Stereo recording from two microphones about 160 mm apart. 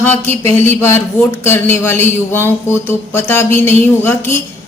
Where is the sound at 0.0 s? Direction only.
15° left (ahead or behind).